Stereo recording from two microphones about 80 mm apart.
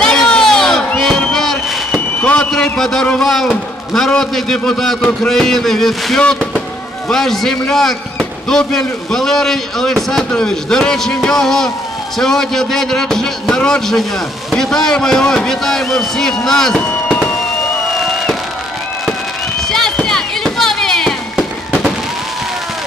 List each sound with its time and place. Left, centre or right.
0.0 s crowd: centre
2.1 s fireworks: centre
2.5 s a man's voice: centre
17.1 s fireworks: centre
19.7 s a sound: centre
21.4 s fireworks: centre